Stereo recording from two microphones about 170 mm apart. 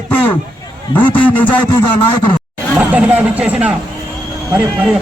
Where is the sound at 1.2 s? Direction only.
10° left (ahead or behind).